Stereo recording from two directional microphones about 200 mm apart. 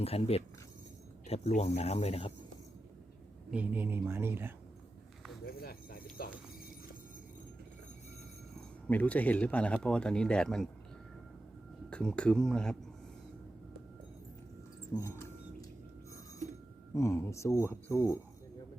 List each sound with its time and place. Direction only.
0.0 s speech: 30° left (ahead or behind)
3.5 s speech: 10° right (ahead or behind)
5.5 s a sound: 50° left (ahead or behind)
8.9 s speech: 5° left (ahead or behind)
11.9 s speech: 5° left (ahead or behind)
14.9 s speech: 15° left (ahead or behind)
16.9 s speech: 15° left (ahead or behind)